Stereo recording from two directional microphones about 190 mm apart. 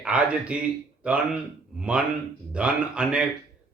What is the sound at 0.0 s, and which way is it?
Speech, 5° right (ahead or behind).